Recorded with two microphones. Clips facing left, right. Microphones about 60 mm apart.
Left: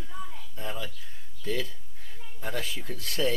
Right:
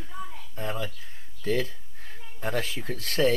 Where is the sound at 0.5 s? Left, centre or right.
Right.